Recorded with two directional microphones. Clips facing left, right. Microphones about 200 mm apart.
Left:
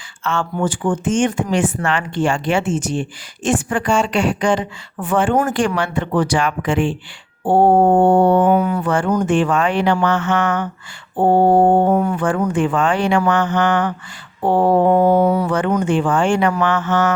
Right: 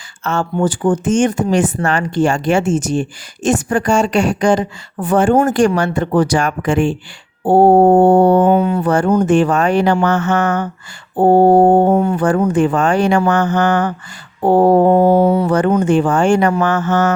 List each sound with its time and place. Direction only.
0.5 s speech: 35° right (ahead or behind)
8.4 s mantra: 25° right (ahead or behind)
9.2 s speech: 40° right (ahead or behind)
11.9 s mantra: 25° right (ahead or behind)
12.2 s speech: 40° right (ahead or behind)
15.1 s mantra: 30° right (ahead or behind)
15.8 s speech: 40° right (ahead or behind)